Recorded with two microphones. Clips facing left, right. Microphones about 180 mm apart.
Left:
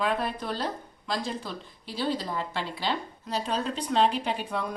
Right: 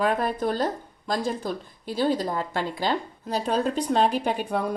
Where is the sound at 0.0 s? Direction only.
45° right (ahead or behind).